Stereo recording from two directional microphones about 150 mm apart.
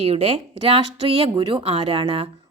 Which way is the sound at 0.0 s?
45° right (ahead or behind).